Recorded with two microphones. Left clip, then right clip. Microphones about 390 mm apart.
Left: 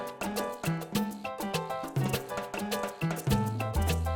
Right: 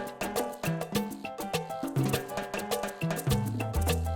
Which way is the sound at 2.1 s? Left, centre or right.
Right.